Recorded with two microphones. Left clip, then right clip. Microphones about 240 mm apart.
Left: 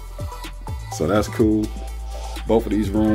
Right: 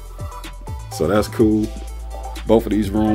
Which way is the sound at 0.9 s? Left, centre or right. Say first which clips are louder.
Right 2 dB; centre.